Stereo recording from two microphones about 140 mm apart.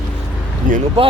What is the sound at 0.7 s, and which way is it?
Speech, 75° right (ahead or behind).